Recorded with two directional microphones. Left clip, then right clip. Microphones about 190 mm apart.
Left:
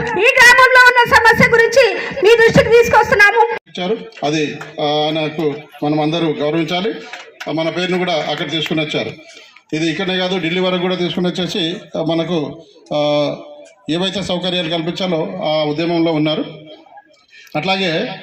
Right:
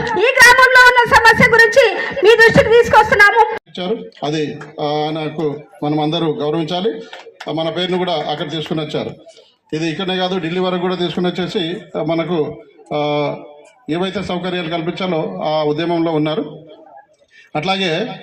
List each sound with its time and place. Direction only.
0.0 s a sound: 35° left (ahead or behind)
4.8 s a man's voice: 35° left (ahead or behind)
6.2 s a man's voice: 25° left (ahead or behind)
7.4 s a man's voice: 40° left (ahead or behind)
15.6 s a man's voice: 30° left (ahead or behind)